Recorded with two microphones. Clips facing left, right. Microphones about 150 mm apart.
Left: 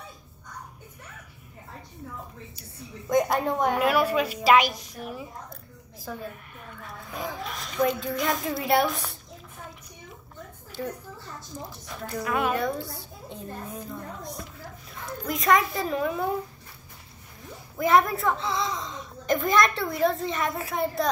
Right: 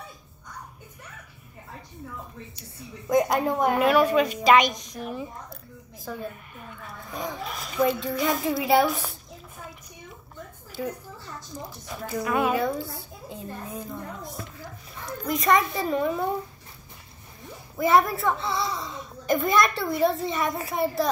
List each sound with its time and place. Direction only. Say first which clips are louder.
3.1 s a child's voice: right 1 dB; centre (ahead or behind)
10.8 s a child's voice: right 2 dB; 5° right (ahead or behind)
17.7 s a child's voice: right 1 dB; centre (ahead or behind)